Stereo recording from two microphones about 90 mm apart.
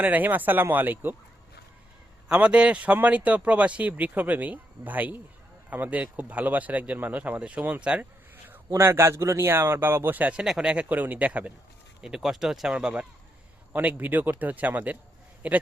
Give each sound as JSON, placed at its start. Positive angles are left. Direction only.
{"t": 0.0, "sound": "a man's voice", "side_deg": -20}
{"t": 2.3, "sound": "speech", "side_deg": -15}
{"t": 8.7, "sound": "a man's voice", "side_deg": -30}
{"t": 12.0, "sound": "a man's voice", "side_deg": -5}